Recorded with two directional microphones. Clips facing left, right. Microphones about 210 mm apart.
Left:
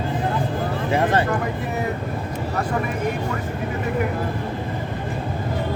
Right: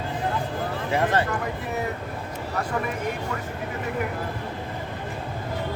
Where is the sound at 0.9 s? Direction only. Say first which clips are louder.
Left 3 dB; 25° left (ahead or behind).